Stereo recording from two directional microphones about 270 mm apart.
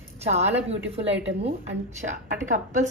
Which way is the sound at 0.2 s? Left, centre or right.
Right.